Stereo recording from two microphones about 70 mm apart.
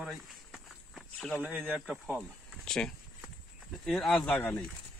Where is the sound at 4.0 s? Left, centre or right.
Centre.